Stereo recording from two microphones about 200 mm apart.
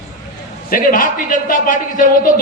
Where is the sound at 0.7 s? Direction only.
45° left (ahead or behind).